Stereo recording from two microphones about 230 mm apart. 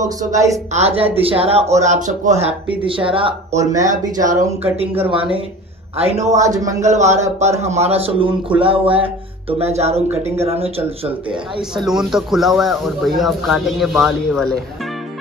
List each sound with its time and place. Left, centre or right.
0.2 s a man's voice: centre
0.7 s speech: right
5.9 s speech: right
6.3 s a man's voice: centre
6.8 s speech: right
11.7 s speech: centre